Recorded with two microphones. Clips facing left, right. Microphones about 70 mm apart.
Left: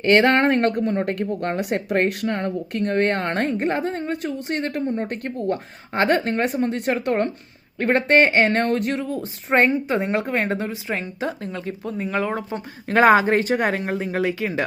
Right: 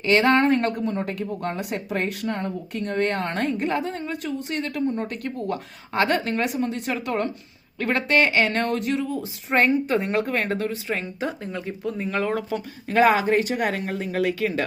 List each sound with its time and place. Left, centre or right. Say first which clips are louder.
0.0 s speech: left 2 dB; left
9.6 s speech: left 1 dB; left
10.9 s speech: left 2 dB; centre
12.3 s speech: right 1 dB; left
12.9 s speech: left 3 dB; left; by 14.6 s centre